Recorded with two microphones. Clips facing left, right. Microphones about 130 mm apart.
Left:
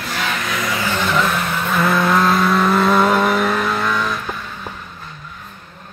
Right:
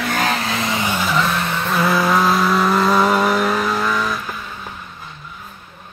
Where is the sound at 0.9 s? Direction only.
5° right (ahead or behind).